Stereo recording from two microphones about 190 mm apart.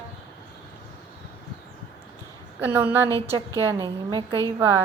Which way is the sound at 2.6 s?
10° right (ahead or behind).